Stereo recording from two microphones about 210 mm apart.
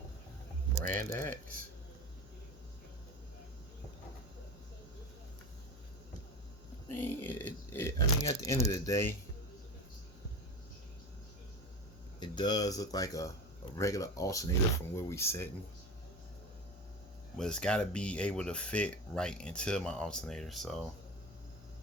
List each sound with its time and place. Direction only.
0.9 s speech: 10° left (ahead or behind)
6.9 s crumpling: 10° left (ahead or behind)
12.2 s speech: 20° left (ahead or behind)
17.3 s speech: 5° left (ahead or behind)